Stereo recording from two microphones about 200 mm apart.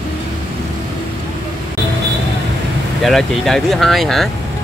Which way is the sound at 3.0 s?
Centre (ahead or behind).